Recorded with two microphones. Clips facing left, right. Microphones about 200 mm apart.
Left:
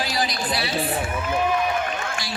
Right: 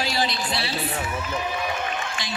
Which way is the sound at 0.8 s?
55° left (ahead or behind).